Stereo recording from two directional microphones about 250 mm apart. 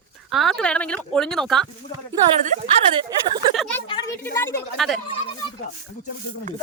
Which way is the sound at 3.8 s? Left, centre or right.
Centre.